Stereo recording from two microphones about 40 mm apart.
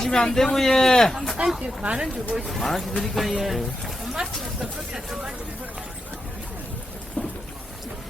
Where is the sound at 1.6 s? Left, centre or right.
Right.